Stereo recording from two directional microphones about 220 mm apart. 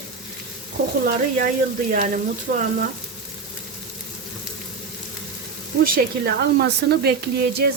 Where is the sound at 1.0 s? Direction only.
40° right (ahead or behind).